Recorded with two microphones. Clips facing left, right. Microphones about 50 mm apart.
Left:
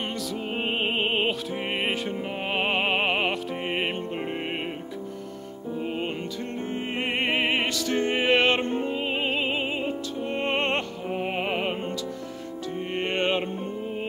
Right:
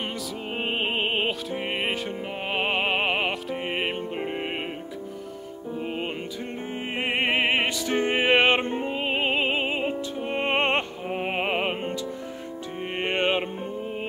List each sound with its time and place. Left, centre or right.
0.6 s music: centre
7.0 s music: centre
10.5 s opera: right
11.3 s music: centre
12.9 s music: centre